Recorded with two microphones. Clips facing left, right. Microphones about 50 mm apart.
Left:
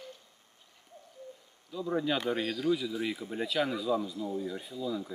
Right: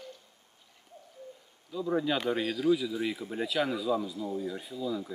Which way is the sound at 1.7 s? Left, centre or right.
Centre.